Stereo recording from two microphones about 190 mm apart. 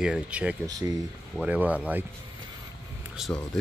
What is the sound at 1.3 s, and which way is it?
Speech, 10° right (ahead or behind).